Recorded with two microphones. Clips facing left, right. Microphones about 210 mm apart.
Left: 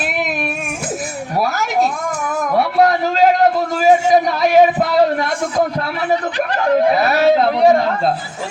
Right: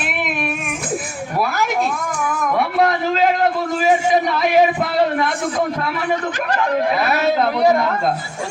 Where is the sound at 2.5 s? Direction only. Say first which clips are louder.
Left 4 dB; 35° left (ahead or behind).